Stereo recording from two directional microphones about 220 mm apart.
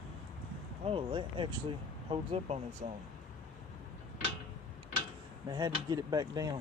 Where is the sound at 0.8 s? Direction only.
25° right (ahead or behind).